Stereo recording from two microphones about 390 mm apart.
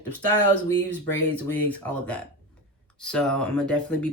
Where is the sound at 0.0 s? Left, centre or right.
Left.